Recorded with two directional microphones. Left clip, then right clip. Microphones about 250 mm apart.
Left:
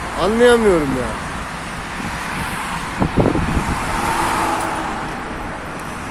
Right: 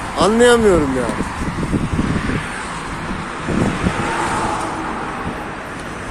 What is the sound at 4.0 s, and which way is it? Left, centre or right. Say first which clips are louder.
Vehicle: left 4 dB; left.